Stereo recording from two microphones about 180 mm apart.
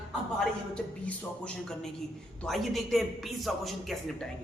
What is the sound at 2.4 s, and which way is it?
A man's voice, centre (ahead or behind).